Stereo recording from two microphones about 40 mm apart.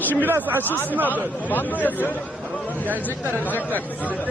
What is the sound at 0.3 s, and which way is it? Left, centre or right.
Speech, right.